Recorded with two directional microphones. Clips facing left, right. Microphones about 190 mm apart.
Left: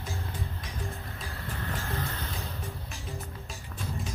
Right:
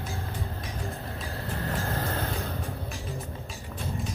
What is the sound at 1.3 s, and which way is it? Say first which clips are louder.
Vehicle: right 4 dB; 35° right (ahead or behind).